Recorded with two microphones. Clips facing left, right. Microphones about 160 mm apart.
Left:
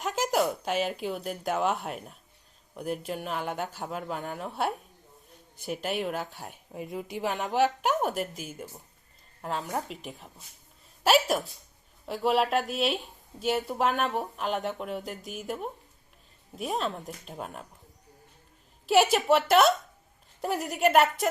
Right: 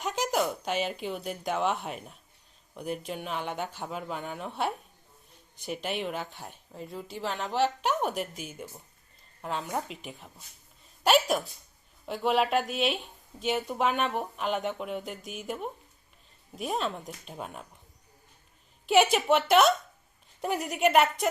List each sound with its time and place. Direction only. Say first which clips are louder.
0.0 s speech: left 2 dB; centre (ahead or behind)
6.5 s speech: left 4 dB; 10° left (ahead or behind)
7.8 s a woman's voice: left 2 dB; centre (ahead or behind)
18.9 s speech: left 1 dB; centre (ahead or behind)